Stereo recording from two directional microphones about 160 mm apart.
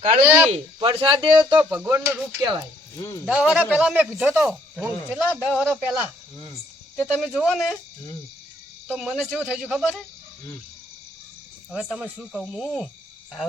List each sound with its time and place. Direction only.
0.3 s speech: 10° right (ahead or behind)
0.8 s speech: 30° right (ahead or behind)
1.5 s a sound: 25° right (ahead or behind)
3.0 s speech: 20° left (ahead or behind)
3.2 s speech: 5° right (ahead or behind)
5.6 s speech: 5° left (ahead or behind)
7.0 s speech: 5° right (ahead or behind)
8.9 s speech: 5° right (ahead or behind)
9.6 s speech: 5° left (ahead or behind)
11.7 s speech: 5° right (ahead or behind)